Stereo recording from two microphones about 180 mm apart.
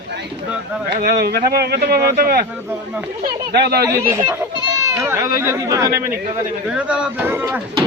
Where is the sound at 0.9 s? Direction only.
55° right (ahead or behind).